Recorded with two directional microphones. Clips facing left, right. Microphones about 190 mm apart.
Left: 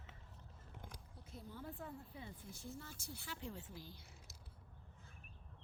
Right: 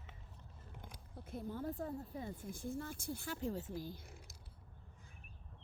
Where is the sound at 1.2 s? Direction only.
50° right (ahead or behind).